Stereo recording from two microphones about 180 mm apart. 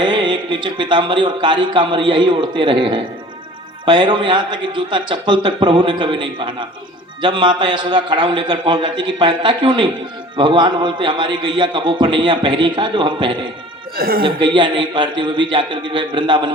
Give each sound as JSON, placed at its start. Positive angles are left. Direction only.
{"t": 0.0, "sound": "speech", "side_deg": -25}
{"t": 13.9, "sound": "a woman's voice", "side_deg": -55}
{"t": 14.2, "sound": "speech", "side_deg": -30}